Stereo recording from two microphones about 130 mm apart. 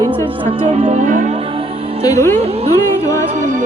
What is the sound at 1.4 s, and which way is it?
Music, 45° right (ahead or behind).